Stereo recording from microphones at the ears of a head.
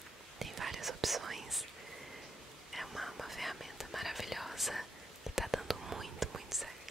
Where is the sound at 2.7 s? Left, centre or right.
Centre.